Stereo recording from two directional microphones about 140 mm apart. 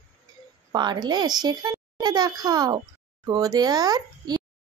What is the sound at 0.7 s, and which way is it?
A child's voice, 30° right (ahead or behind).